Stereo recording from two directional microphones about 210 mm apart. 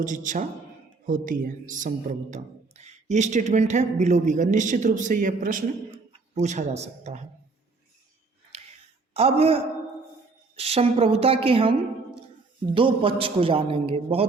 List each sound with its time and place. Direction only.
0.0 s speech: 40° right (ahead or behind)
9.1 s a man's voice: 30° right (ahead or behind)